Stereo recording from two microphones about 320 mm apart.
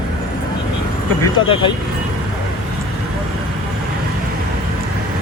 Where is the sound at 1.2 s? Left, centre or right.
Centre.